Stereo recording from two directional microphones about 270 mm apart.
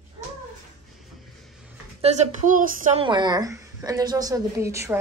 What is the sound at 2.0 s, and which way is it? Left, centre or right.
Speech, right.